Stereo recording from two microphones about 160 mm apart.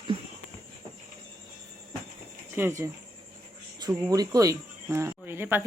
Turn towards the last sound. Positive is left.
turn(degrees=-15)  # may be behind; listen again after turning